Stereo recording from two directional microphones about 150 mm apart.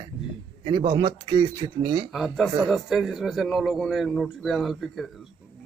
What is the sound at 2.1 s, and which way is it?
A man's voice, centre (ahead or behind).